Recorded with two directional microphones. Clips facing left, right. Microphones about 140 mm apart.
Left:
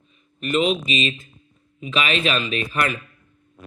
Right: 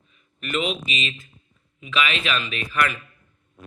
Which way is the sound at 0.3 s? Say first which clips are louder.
Left 6 dB; 30° left (ahead or behind).